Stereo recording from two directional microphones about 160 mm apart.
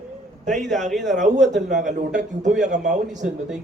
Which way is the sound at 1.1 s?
50° right (ahead or behind).